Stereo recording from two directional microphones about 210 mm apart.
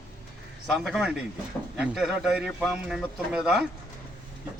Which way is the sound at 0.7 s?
Centre (ahead or behind).